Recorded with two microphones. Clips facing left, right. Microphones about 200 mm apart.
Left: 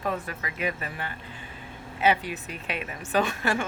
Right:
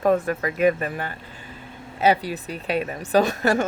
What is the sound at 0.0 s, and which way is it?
Speech, 50° right (ahead or behind).